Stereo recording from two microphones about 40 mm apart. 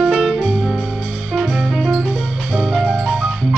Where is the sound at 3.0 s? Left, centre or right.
Centre.